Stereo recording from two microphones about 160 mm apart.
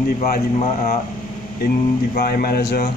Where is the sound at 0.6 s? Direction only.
45° left (ahead or behind).